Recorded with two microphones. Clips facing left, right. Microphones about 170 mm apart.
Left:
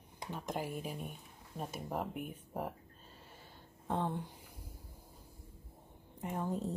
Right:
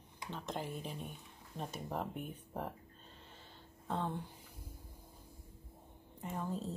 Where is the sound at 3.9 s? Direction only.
15° left (ahead or behind).